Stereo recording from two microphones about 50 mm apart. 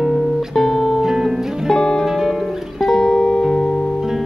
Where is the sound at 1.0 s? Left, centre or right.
Centre.